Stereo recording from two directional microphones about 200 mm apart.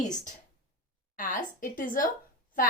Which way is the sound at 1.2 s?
40° left (ahead or behind).